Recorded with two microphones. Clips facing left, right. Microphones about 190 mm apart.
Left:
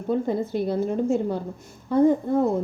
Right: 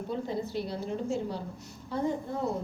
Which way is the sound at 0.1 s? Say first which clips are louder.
Left 10 dB; 50° left (ahead or behind).